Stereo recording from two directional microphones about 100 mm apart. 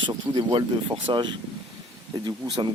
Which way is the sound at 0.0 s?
55° right (ahead or behind).